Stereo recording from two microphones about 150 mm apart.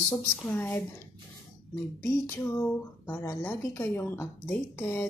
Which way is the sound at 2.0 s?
15° left (ahead or behind).